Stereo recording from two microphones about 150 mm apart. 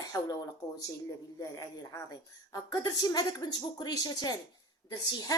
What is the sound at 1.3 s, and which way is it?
A woman's voice, 25° left (ahead or behind).